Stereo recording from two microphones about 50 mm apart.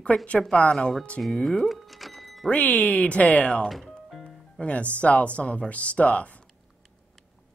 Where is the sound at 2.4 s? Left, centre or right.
Left.